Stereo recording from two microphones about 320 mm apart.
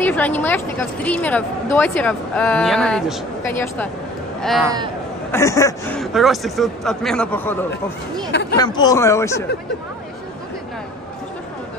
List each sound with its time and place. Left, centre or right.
0.0 s a woman's voice: centre
8.3 s speech: left
8.5 s speech: centre